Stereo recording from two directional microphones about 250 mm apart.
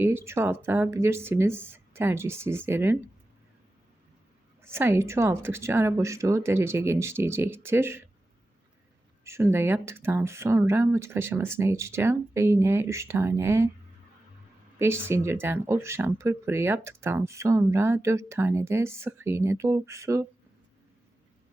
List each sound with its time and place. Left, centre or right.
0.0 s speech: centre
4.6 s speech: centre
9.2 s speech: centre
14.8 s speech: centre